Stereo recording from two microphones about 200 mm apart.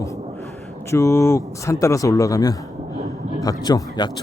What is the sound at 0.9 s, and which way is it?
A man's voice, 15° left (ahead or behind).